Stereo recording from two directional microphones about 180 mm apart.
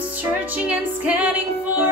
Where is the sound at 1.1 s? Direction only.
10° right (ahead or behind).